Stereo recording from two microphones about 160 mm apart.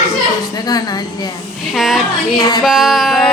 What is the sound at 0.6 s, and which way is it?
Speech, 25° left (ahead or behind).